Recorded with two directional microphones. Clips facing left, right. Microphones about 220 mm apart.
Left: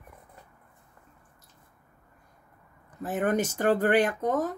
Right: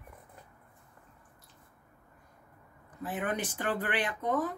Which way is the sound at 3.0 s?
45° left (ahead or behind).